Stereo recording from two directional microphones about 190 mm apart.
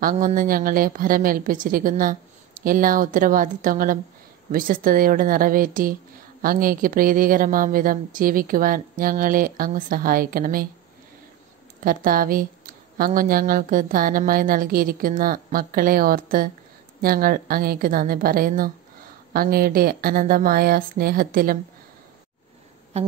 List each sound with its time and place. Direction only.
0.0 s a woman's voice: 45° right (ahead or behind)
11.8 s a woman's voice: 50° right (ahead or behind)
22.9 s a sound: 35° right (ahead or behind)